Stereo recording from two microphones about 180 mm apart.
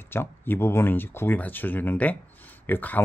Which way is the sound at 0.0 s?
10° left (ahead or behind).